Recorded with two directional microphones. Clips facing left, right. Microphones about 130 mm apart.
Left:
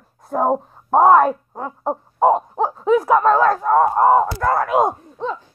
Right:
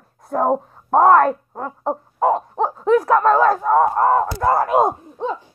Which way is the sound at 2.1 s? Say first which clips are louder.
Left 3 dB; 20° left (ahead or behind).